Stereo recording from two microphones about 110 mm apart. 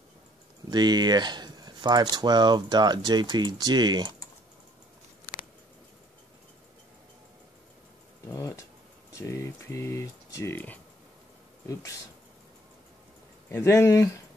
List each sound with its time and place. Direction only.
0.7 s speech: 40° right (ahead or behind)
8.3 s a sound: 25° left (ahead or behind)
9.2 s speech: 25° left (ahead or behind)
11.6 s speech: 30° left (ahead or behind)
13.5 s speech: 25° left (ahead or behind)